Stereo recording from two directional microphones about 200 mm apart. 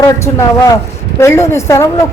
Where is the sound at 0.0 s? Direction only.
15° left (ahead or behind).